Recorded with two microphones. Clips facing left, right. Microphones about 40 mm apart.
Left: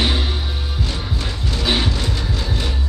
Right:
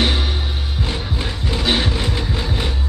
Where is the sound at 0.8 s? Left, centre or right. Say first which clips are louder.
Right 2 dB; right.